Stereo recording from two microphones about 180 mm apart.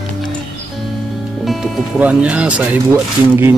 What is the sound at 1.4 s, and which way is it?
Speech, centre (ahead or behind).